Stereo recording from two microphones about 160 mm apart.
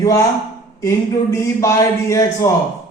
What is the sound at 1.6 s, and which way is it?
Speech, 20° left (ahead or behind).